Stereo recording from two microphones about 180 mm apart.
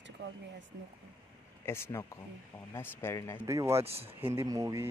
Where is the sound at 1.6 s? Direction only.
15° left (ahead or behind).